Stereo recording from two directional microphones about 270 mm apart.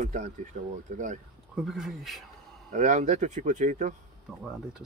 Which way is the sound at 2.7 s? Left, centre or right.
Right.